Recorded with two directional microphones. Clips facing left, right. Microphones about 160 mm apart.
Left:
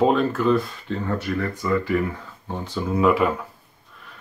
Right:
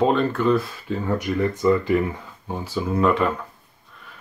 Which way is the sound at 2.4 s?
5° right (ahead or behind).